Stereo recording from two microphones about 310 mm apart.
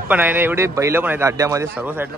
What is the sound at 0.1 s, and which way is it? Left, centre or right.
A man's voice, centre.